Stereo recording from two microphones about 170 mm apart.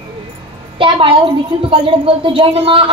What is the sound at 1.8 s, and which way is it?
Speech, 30° right (ahead or behind).